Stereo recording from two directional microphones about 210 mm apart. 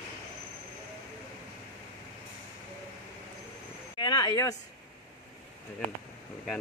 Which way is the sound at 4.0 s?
20° left (ahead or behind).